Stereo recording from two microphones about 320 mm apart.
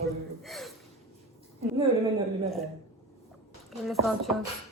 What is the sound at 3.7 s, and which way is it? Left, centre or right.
Speech, centre.